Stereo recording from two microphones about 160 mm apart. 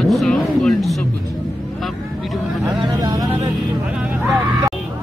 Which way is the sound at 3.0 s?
25° right (ahead or behind).